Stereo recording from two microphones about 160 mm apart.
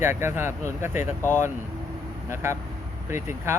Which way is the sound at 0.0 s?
15° right (ahead or behind).